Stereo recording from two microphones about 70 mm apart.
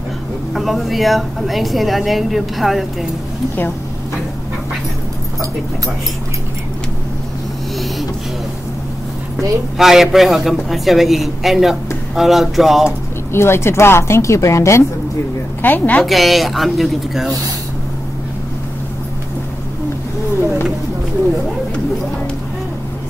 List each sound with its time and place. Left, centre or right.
0.6 s a woman's voice: centre
9.8 s a woman's voice: centre
13.3 s a woman's voice: left
15.6 s a woman's voice: left
16.1 s a woman's voice: centre